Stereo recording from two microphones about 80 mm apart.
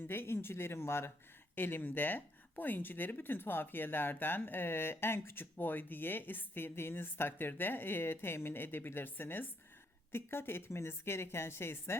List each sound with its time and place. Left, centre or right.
0.1 s a woman's voice: left